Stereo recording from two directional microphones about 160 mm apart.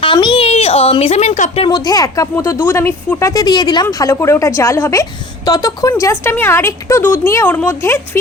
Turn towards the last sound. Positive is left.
turn(degrees=15)  # may be behind; listen again after turning